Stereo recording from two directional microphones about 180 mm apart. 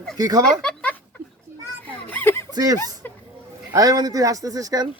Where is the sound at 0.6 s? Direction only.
5° left (ahead or behind).